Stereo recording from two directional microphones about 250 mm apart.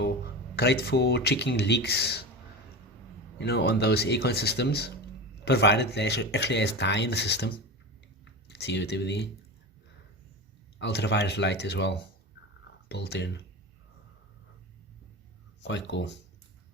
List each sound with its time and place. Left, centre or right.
0.5 s speech: left
3.3 s speech: left
10.8 s speech: left
15.6 s speech: left